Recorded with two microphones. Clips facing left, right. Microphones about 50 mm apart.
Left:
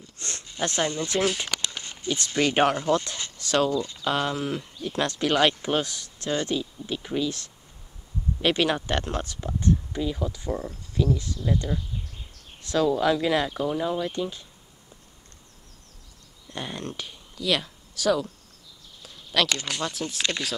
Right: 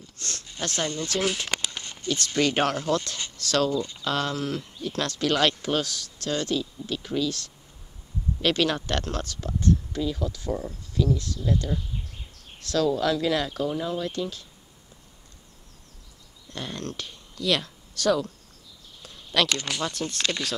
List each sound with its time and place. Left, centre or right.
0.2 s a sound: left
2.0 s speech: centre
16.4 s speech: centre